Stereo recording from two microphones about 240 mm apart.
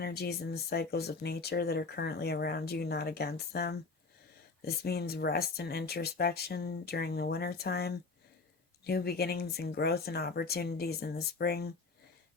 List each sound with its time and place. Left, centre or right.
0.0 s speech: left